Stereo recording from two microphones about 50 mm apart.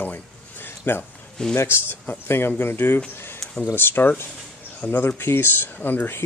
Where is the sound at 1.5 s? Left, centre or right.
Left.